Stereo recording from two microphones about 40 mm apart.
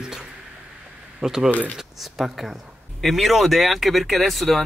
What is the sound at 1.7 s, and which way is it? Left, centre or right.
Speech, centre.